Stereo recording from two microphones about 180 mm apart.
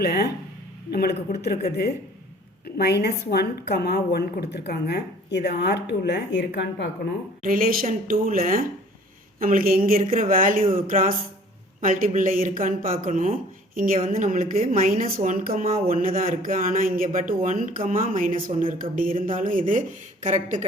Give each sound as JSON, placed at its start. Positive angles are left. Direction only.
{"t": 0.0, "sound": "a woman's voice", "side_deg": 60}
{"t": 7.4, "sound": "speech", "side_deg": -50}